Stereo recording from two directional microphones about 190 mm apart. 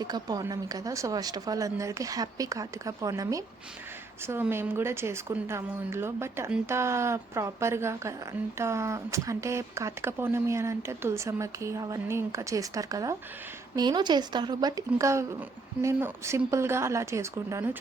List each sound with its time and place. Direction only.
0.0 s a woman's voice: 20° right (ahead or behind)